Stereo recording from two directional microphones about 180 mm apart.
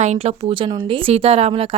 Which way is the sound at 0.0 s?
40° right (ahead or behind).